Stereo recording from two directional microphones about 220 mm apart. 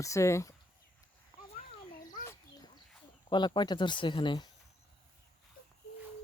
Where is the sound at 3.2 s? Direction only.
20° left (ahead or behind).